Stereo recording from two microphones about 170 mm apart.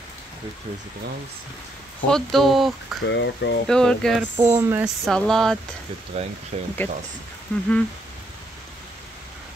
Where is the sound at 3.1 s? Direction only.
90° left.